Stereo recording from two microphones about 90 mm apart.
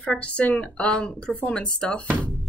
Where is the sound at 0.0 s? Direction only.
10° left (ahead or behind).